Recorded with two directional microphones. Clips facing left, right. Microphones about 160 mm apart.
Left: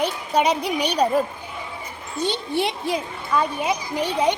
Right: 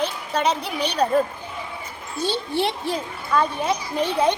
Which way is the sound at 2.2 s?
15° left (ahead or behind).